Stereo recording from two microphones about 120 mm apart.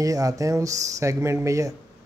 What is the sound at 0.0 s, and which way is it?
Speech, 30° right (ahead or behind).